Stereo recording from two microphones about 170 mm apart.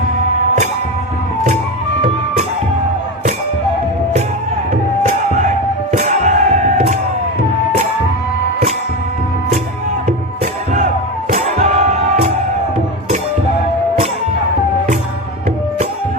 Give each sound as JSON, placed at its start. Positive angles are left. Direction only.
{"t": 4.7, "sound": "music", "side_deg": -45}
{"t": 10.1, "sound": "music", "side_deg": -45}